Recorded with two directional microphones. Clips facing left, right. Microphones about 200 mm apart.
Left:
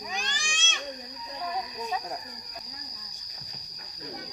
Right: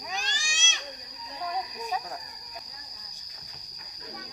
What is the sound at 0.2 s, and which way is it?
Cat, 55° left (ahead or behind).